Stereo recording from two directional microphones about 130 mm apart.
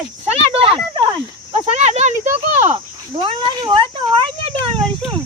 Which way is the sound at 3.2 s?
35° right (ahead or behind).